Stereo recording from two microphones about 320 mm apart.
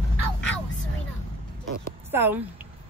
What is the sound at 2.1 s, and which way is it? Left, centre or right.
Speech, centre.